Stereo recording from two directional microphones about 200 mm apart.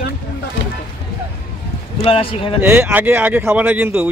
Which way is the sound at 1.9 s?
25° left (ahead or behind).